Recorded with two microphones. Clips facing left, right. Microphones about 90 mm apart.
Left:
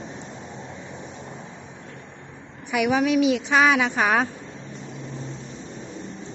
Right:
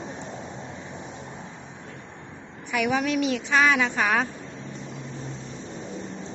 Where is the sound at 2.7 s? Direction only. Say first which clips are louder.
Left 4 dB; 10° left (ahead or behind).